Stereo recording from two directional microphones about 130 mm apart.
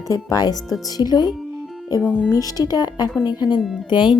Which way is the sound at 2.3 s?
30° left (ahead or behind).